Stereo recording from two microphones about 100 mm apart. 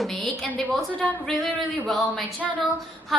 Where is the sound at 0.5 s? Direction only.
15° left (ahead or behind).